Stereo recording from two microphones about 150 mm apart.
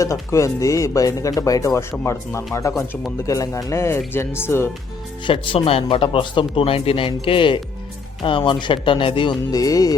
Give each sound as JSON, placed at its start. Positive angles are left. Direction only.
{"t": 0.0, "sound": "speech", "side_deg": 20}
{"t": 5.2, "sound": "speech", "side_deg": 35}